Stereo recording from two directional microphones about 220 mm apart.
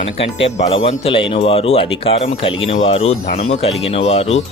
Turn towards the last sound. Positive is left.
turn(degrees=30)  # may be behind; listen again after turning